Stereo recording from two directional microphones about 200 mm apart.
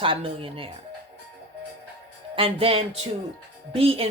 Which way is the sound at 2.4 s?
30° right (ahead or behind).